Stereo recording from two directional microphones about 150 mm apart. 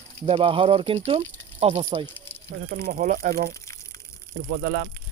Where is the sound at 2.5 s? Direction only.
90° right.